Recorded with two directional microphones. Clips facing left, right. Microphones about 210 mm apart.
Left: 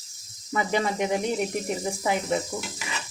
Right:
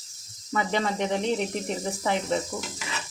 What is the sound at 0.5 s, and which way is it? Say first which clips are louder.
Speech: left 1 dB; 10° left (ahead or behind).